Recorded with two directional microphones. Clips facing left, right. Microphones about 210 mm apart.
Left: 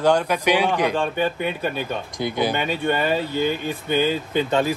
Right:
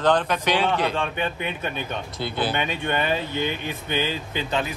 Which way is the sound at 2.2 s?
15° left (ahead or behind).